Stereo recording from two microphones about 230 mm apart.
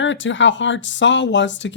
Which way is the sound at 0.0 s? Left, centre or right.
Left.